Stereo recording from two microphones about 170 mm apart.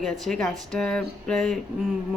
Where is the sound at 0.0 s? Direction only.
5° left (ahead or behind).